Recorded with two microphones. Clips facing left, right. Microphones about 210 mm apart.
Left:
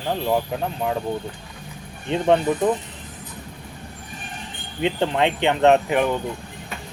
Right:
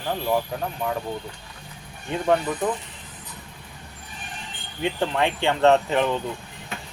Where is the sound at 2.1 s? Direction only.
25° left (ahead or behind).